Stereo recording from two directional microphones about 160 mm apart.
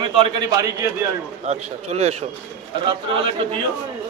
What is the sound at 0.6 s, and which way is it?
Speech, 20° right (ahead or behind).